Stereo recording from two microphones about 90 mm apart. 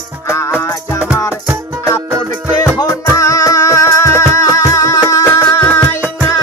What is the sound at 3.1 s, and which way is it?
Music, 40° left (ahead or behind).